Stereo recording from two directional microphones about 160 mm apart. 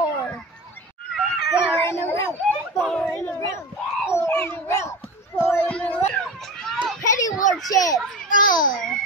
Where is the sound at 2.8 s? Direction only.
Centre (ahead or behind).